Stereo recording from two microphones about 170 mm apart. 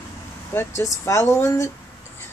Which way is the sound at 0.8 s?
15° left (ahead or behind).